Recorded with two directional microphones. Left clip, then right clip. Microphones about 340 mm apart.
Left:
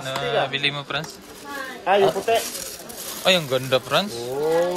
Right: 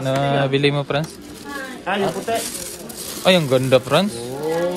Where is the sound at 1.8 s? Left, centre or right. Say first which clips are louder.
Left 4 dB; left.